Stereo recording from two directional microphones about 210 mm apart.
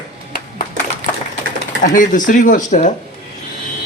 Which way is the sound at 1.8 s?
40° left (ahead or behind).